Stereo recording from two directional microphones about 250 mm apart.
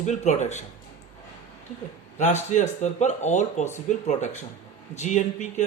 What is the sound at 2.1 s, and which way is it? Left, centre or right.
Speech, left.